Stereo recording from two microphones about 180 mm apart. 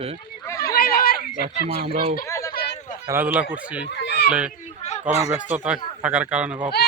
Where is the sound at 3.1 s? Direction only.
10° right (ahead or behind).